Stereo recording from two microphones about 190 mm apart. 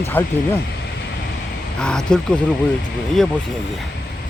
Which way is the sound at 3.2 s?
5° left (ahead or behind).